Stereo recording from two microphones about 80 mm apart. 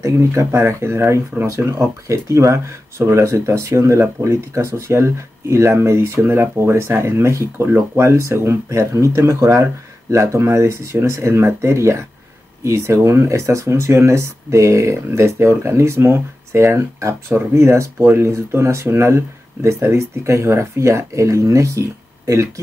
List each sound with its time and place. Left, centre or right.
0.0 s speech: right